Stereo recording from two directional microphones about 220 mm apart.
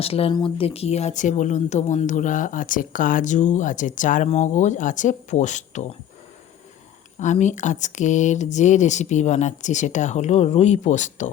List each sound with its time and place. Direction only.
0.0 s speech: 25° left (ahead or behind)
7.2 s speech: 30° left (ahead or behind)